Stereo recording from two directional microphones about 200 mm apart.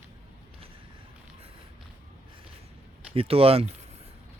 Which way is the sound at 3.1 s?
30° right (ahead or behind).